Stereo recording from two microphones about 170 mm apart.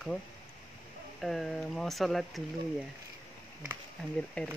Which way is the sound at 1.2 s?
Centre (ahead or behind).